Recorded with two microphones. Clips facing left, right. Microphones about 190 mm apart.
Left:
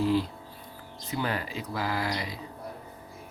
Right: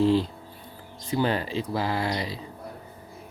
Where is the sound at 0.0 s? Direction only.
25° right (ahead or behind).